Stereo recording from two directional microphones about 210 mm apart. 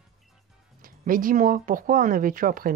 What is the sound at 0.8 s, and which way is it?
Speech, 40° right (ahead or behind).